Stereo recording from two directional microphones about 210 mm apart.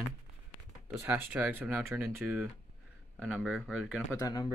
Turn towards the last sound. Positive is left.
turn(degrees=20)  # may be behind; listen again after turning